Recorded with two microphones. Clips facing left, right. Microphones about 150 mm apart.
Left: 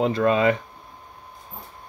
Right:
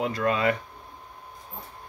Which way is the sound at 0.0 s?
25° left (ahead or behind).